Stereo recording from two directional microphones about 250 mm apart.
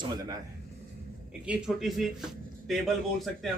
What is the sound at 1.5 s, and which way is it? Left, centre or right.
A man's voice, centre.